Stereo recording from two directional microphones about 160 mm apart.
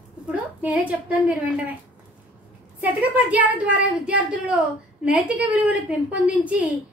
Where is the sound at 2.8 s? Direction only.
10° right (ahead or behind).